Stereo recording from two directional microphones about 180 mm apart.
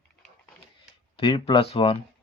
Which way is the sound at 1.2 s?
30° left (ahead or behind).